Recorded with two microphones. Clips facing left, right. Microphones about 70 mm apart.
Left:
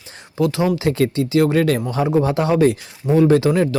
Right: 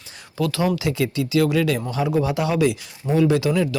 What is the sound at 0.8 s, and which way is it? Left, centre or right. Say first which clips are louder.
Speech: left 5 dB; left.